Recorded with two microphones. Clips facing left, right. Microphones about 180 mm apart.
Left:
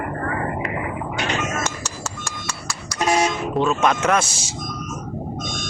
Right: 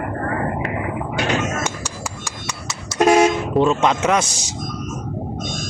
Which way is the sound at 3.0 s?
55° right (ahead or behind).